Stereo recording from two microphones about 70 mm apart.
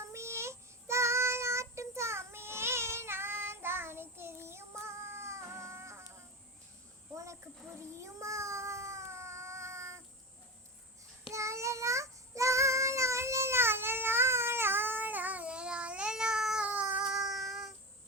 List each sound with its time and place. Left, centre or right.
0.0 s child singing: right
7.8 s a sound: right
11.3 s child singing: right; by 16.6 s centre
16.6 s cat: centre
17.1 s child singing: centre